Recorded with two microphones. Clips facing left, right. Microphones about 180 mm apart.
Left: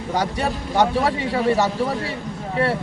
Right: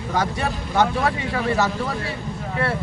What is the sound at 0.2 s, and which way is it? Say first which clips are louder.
A man's voice: even; 15° left (ahead or behind).